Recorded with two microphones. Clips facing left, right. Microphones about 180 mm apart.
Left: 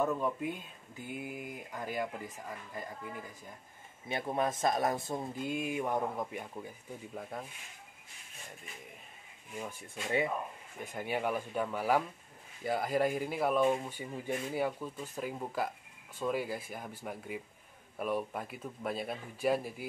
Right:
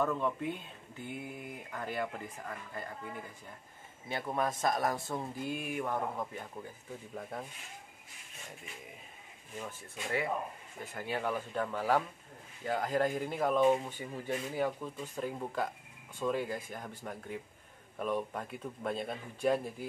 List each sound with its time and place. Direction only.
0.0 s speech: 10° left (ahead or behind)
4.1 s speech: 20° left (ahead or behind)
7.2 s speech: centre (ahead or behind)
9.6 s speech: 15° left (ahead or behind)